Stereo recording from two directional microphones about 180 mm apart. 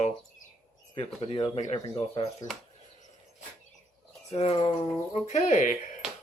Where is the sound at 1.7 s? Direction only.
30° left (ahead or behind).